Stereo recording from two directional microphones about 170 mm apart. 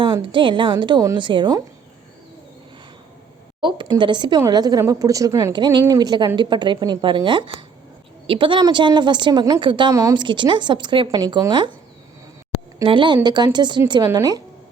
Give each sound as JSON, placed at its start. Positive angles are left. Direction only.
{"t": 0.0, "sound": "a woman's voice", "side_deg": -30}
{"t": 3.6, "sound": "a woman's voice", "side_deg": -30}
{"t": 12.8, "sound": "a woman's voice", "side_deg": -30}